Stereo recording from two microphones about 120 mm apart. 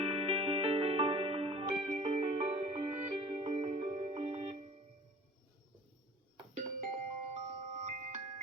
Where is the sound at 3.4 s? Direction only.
55° right (ahead or behind).